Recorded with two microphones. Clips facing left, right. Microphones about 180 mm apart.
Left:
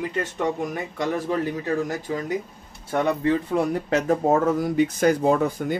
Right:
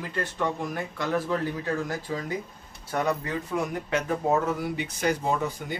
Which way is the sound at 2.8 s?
30° left (ahead or behind).